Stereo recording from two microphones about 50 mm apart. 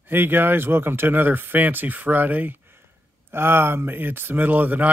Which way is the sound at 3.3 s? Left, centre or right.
Right.